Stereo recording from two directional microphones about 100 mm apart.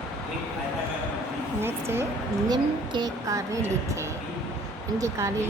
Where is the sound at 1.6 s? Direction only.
25° right (ahead or behind).